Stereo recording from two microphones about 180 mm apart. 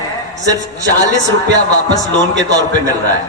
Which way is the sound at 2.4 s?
20° right (ahead or behind).